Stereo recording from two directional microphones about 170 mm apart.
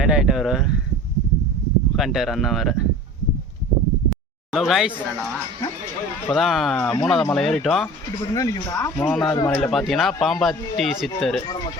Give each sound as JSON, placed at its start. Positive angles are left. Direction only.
{"t": 0.0, "sound": "speech", "side_deg": -5}
{"t": 2.0, "sound": "speech", "side_deg": 0}
{"t": 4.5, "sound": "speech", "side_deg": 0}
{"t": 6.3, "sound": "speech", "side_deg": 0}
{"t": 8.4, "sound": "speech", "side_deg": 20}
{"t": 9.0, "sound": "speech", "side_deg": 5}